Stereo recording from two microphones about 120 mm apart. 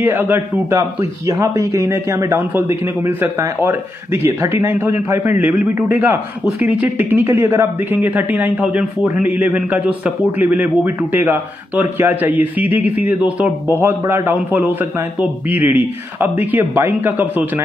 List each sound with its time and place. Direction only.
0.0 s a man's voice: 15° right (ahead or behind)